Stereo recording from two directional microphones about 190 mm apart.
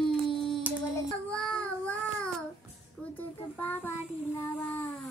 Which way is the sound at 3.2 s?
10° left (ahead or behind).